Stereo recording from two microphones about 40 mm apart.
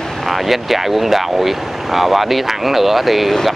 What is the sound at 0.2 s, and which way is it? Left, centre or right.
Speech, centre.